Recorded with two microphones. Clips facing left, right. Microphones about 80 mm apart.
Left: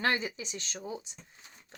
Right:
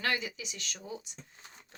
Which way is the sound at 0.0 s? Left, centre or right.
Left.